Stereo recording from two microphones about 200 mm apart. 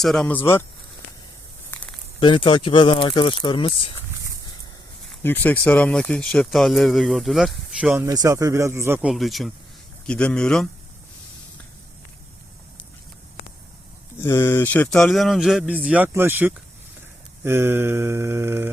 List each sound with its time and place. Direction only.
0.0 s speech: centre (ahead or behind)
1.7 s a sound: 5° left (ahead or behind)
2.2 s speech: 25° left (ahead or behind)
5.2 s speech: 10° left (ahead or behind)
14.2 s speech: 15° left (ahead or behind); by 16.6 s 10° right (ahead or behind)
17.4 s mantra: 10° right (ahead or behind)